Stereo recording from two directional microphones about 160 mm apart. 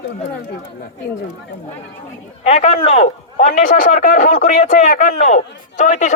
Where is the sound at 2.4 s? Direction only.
40° left (ahead or behind).